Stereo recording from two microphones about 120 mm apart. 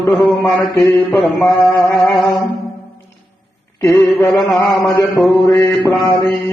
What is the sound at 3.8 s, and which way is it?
Mantra, 20° left (ahead or behind).